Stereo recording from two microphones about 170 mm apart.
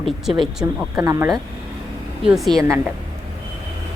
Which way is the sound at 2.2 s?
Centre (ahead or behind).